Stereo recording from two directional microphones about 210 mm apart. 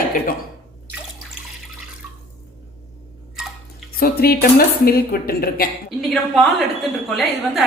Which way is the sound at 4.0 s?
45° left (ahead or behind).